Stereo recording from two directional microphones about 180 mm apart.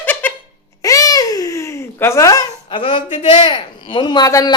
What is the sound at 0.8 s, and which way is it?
Babbling, 20° left (ahead or behind).